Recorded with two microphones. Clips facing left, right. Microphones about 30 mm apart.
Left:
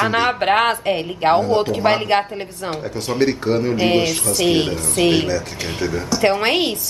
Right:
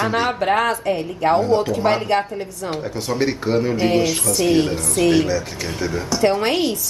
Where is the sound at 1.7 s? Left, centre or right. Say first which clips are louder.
Left 1 dB; left.